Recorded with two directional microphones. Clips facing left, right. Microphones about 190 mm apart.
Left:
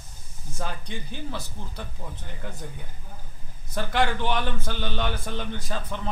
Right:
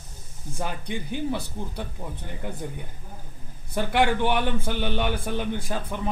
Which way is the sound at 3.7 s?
15° right (ahead or behind).